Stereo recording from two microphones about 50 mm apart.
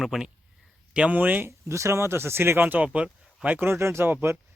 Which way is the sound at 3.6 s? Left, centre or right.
Right.